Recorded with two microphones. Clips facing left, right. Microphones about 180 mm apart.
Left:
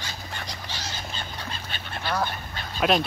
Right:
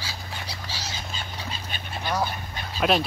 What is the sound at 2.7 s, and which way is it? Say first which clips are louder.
Speech: even; centre (ahead or behind).